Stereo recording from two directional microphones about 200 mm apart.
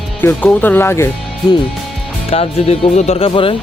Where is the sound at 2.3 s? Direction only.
30° left (ahead or behind).